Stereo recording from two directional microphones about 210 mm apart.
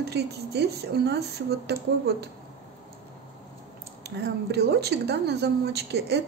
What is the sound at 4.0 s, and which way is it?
A woman's voice, 50° right (ahead or behind).